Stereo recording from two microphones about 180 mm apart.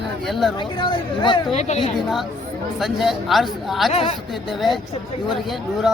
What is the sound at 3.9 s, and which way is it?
Speech, 40° left (ahead or behind).